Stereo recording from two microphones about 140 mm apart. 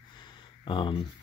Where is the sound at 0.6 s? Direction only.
35° left (ahead or behind).